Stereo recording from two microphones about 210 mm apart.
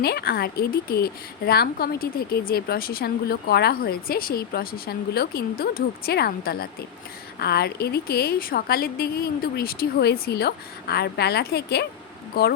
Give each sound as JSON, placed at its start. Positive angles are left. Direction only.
{"t": 0.0, "sound": "a woman's voice", "side_deg": 50}